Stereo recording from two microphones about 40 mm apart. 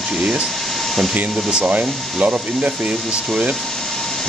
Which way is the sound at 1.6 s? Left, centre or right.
Right.